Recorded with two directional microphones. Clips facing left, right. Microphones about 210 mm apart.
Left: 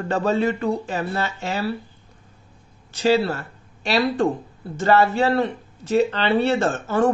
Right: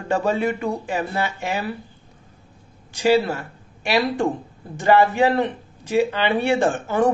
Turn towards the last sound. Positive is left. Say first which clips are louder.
# right 1 dB
turn(degrees=-15)  # may be behind; listen again after turning